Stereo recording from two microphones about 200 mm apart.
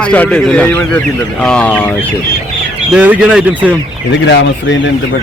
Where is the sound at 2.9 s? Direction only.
5° right (ahead or behind).